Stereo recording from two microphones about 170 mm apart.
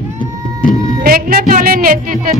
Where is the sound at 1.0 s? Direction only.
60° right (ahead or behind).